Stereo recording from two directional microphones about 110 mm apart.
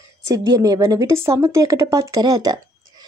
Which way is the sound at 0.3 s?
30° right (ahead or behind).